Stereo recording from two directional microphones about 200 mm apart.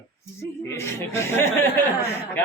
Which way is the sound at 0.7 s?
10° left (ahead or behind).